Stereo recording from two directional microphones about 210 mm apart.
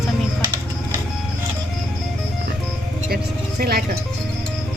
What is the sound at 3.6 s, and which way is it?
Speech, 45° right (ahead or behind).